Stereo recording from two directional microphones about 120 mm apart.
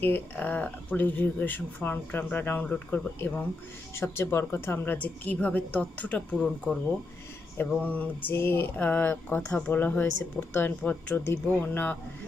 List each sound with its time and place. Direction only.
0.0 s speech: 15° left (ahead or behind)
6.4 s speech: centre (ahead or behind)
7.8 s speech: 15° left (ahead or behind)